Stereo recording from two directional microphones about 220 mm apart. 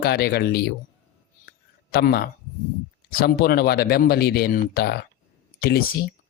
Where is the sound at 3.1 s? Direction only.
45° left (ahead or behind).